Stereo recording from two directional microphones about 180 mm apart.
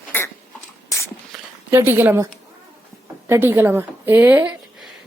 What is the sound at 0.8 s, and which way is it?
Walk, 15° left (ahead or behind).